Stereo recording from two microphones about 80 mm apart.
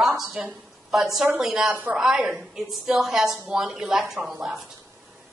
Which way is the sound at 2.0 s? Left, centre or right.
Centre.